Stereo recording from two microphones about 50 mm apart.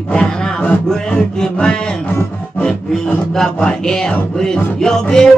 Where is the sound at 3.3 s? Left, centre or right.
Centre.